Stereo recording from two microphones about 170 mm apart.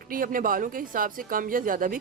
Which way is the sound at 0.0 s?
55° right (ahead or behind).